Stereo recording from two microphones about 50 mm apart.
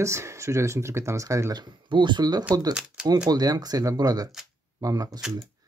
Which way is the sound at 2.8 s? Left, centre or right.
Centre.